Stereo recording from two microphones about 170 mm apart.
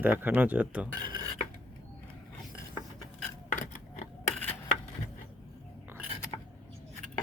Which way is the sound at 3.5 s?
45° left (ahead or behind).